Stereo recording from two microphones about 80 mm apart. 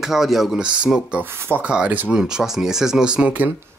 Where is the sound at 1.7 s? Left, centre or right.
Centre.